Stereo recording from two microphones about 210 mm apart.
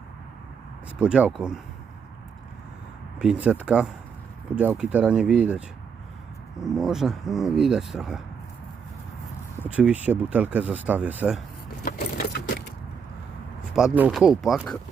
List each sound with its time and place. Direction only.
0.9 s speech: 5° right (ahead or behind)
3.2 s speech: 5° right (ahead or behind)
9.6 s speech: 5° right (ahead or behind)
11.9 s vehicle: 50° left (ahead or behind)
13.7 s speech: 5° right (ahead or behind)